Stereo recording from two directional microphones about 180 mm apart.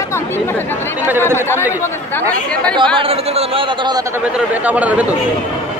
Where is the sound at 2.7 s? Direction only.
25° right (ahead or behind).